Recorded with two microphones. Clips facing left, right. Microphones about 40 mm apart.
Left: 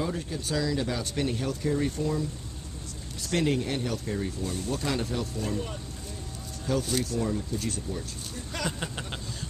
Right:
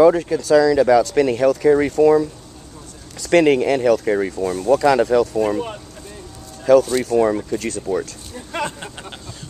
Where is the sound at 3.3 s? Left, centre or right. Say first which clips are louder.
Right 13 dB; right.